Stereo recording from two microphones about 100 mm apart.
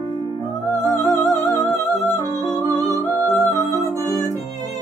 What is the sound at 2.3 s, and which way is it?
Music, 35° right (ahead or behind).